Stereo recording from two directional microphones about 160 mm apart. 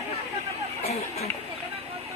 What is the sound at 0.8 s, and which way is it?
Chatter, 40° left (ahead or behind).